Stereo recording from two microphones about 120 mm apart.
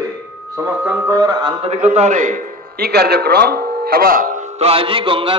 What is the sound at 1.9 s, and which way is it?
Speech, 80° right.